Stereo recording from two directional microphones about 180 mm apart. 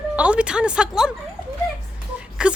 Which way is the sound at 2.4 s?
5° right (ahead or behind).